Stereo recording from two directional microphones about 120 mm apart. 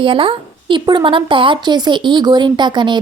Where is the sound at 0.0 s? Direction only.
45° right (ahead or behind).